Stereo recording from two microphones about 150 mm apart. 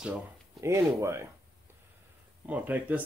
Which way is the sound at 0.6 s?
20° right (ahead or behind).